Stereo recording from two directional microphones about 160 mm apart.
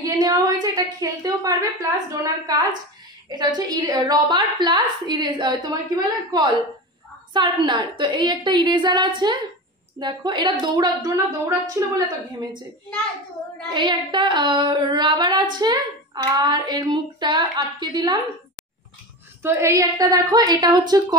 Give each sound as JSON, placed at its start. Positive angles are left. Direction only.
{"t": 0.2, "sound": "a woman's voice", "side_deg": -20}
{"t": 13.7, "sound": "a woman's voice", "side_deg": -30}
{"t": 19.4, "sound": "a woman's voice", "side_deg": -15}